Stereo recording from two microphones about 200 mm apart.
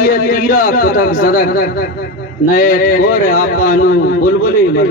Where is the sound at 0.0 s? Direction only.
45° left (ahead or behind).